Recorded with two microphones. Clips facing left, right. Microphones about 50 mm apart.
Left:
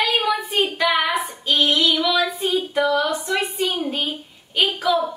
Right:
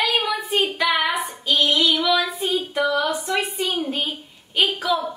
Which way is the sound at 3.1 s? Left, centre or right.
Centre.